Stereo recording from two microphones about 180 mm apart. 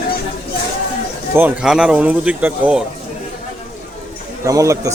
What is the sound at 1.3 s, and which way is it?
Speech, 10° right (ahead or behind).